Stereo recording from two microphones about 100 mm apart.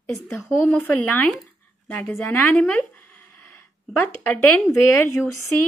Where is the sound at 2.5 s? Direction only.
15° left (ahead or behind).